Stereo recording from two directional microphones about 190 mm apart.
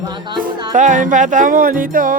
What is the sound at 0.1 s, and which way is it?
Speech, 25° right (ahead or behind).